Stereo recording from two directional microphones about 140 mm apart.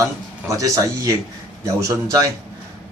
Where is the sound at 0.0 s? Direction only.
25° right (ahead or behind).